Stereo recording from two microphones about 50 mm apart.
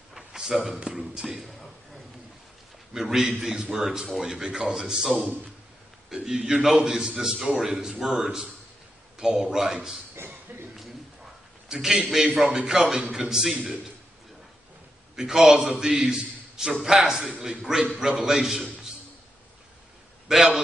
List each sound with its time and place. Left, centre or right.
0.1 s a sound: centre
0.8 s speech: centre
2.9 s a man's voice: centre
10.5 s cough: right
11.7 s a man's voice: centre
15.1 s a man's voice: centre
20.3 s a man's voice: centre